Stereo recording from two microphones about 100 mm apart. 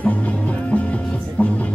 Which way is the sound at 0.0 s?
15° left (ahead or behind).